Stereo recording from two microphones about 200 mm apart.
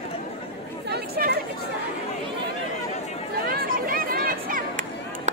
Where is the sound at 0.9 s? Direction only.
50° right (ahead or behind).